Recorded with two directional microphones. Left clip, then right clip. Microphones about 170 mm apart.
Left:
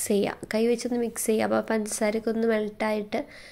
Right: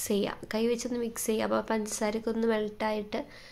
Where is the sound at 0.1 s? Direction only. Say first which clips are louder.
Left 5 dB; 20° left (ahead or behind).